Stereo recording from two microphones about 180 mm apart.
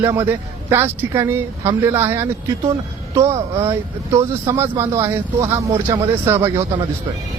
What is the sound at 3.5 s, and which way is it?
Speech, 15° right (ahead or behind).